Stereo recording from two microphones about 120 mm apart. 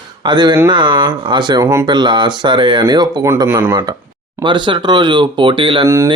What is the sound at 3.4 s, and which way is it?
Speech, 20° right (ahead or behind).